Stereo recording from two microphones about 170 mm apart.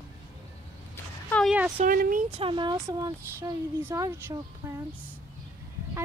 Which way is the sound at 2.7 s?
15° right (ahead or behind).